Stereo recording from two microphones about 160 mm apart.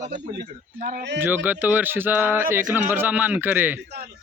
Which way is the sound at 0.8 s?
60° right (ahead or behind).